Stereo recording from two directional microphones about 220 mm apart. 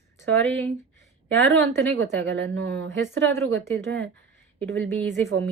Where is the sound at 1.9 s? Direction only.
60° right (ahead or behind).